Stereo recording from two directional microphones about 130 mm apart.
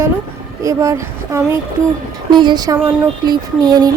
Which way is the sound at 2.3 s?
35° right (ahead or behind).